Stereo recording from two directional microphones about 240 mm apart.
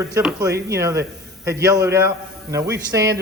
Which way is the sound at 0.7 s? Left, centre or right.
Centre.